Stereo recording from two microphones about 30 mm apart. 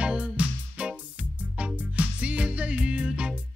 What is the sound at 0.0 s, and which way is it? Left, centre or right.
Music, right.